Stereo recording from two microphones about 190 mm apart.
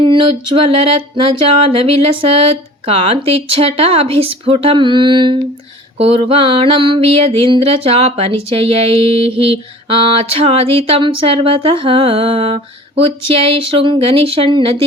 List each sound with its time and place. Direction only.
0.0 s music: 25° right (ahead or behind)